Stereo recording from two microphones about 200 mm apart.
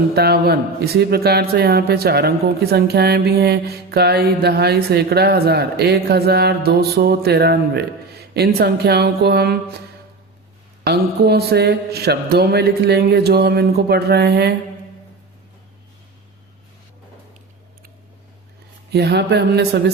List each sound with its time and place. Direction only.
0.1 s a man's voice: 55° right (ahead or behind)
10.8 s a man's voice: 55° right (ahead or behind)
18.9 s a sound: 55° right (ahead or behind)